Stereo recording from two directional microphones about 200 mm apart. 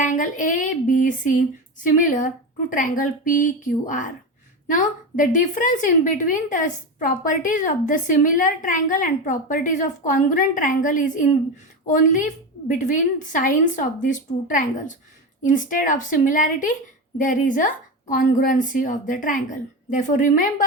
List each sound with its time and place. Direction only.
0.0 s a woman's voice: 40° left (ahead or behind)